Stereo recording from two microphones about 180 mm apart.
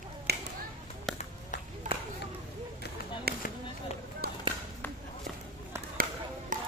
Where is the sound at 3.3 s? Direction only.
60° right (ahead or behind).